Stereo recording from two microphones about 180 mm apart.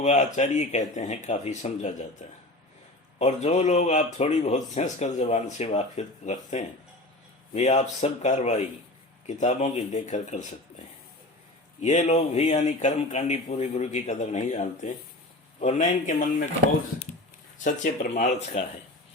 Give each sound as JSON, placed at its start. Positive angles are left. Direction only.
{"t": 0.0, "sound": "speech", "side_deg": 40}
{"t": 11.8, "sound": "speech", "side_deg": 40}
{"t": 17.6, "sound": "speech", "side_deg": 45}